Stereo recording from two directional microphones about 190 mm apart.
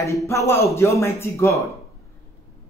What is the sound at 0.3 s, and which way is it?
A man's voice, 15° left (ahead or behind).